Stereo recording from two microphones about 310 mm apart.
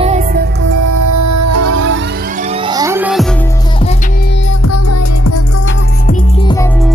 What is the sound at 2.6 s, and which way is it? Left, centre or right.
Music, centre.